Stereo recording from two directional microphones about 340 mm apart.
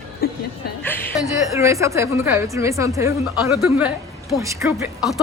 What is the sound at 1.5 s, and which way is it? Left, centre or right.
A woman's voice, centre.